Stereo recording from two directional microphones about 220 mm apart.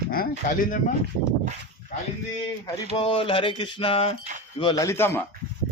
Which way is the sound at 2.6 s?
25° left (ahead or behind).